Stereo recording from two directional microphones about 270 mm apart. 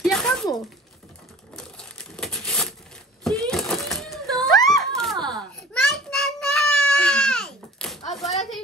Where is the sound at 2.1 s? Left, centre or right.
Centre.